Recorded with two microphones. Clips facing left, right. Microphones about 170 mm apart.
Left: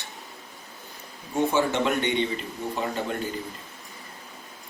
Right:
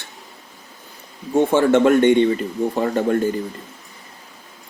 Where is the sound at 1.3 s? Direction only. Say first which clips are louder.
Right 8 dB; 50° right (ahead or behind).